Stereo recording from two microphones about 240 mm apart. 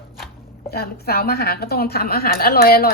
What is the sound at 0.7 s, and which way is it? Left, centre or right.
A woman's voice, left.